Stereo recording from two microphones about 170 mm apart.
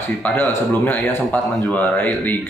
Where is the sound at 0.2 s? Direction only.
10° left (ahead or behind).